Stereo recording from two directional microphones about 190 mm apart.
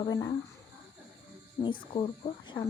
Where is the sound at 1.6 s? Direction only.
25° left (ahead or behind).